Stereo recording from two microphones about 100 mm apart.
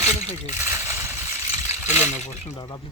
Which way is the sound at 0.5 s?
25° right (ahead or behind).